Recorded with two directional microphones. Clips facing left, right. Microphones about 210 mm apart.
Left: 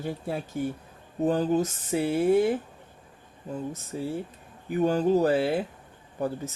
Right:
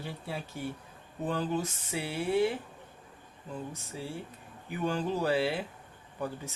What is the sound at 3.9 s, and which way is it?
Speech, 45° left (ahead or behind).